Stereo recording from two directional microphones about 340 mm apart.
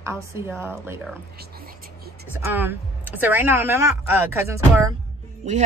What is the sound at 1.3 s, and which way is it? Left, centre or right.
Whispering, right.